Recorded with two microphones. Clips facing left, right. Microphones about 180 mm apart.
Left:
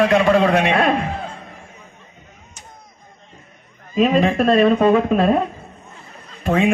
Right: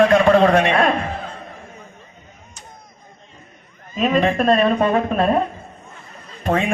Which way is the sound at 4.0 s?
40° right (ahead or behind).